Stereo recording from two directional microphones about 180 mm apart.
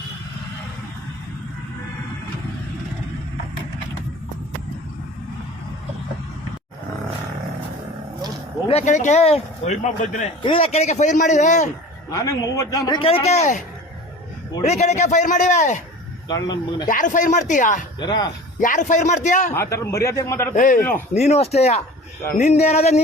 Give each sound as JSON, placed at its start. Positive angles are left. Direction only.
{"t": 8.6, "sound": "speech", "side_deg": 40}
{"t": 10.4, "sound": "speech", "side_deg": 30}
{"t": 12.1, "sound": "a man's voice", "side_deg": 20}
{"t": 14.6, "sound": "a man's voice", "side_deg": 40}
{"t": 16.3, "sound": "a man's voice", "side_deg": 20}
{"t": 16.9, "sound": "a man's voice", "side_deg": 45}
{"t": 18.0, "sound": "a man's voice", "side_deg": 25}
{"t": 18.6, "sound": "a man's voice", "side_deg": 45}
{"t": 19.5, "sound": "a man's voice", "side_deg": 15}
{"t": 20.6, "sound": "a man's voice", "side_deg": 45}